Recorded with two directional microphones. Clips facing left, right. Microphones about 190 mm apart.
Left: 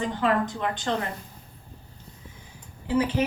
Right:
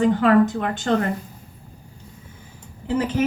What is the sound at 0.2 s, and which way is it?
Speech, 50° right (ahead or behind).